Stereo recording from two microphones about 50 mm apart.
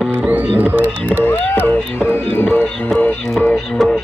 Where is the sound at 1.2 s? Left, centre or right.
Left.